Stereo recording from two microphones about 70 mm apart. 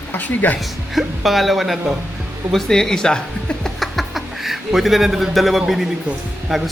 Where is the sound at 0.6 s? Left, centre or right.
Centre.